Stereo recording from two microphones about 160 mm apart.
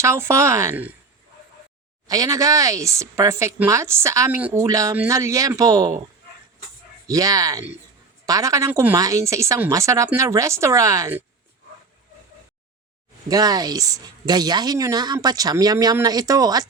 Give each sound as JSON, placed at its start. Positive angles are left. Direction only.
{"t": 0.0, "sound": "speech", "side_deg": -15}
{"t": 2.0, "sound": "a woman's voice", "side_deg": -20}
{"t": 7.1, "sound": "a woman's voice", "side_deg": -20}
{"t": 13.2, "sound": "a woman's voice", "side_deg": -25}